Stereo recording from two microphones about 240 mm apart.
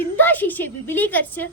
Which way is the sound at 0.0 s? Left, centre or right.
Centre.